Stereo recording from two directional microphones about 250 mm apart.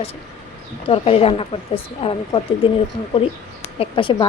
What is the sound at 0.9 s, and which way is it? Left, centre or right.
A woman's voice, left.